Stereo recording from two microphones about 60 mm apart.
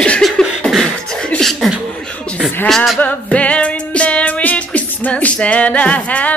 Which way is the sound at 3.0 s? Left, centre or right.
Left.